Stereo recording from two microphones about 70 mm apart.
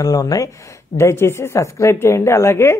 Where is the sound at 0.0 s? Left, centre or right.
Left.